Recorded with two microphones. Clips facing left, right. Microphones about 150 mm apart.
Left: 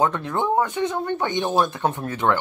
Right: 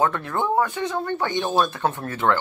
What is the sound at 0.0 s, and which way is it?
Speech, 20° left (ahead or behind).